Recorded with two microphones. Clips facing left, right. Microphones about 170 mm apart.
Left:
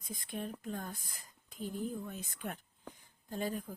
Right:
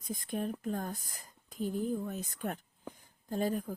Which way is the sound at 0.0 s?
45° right (ahead or behind).